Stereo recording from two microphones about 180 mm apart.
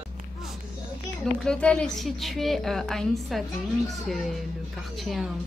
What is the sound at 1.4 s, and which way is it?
A woman's voice, 5° left (ahead or behind).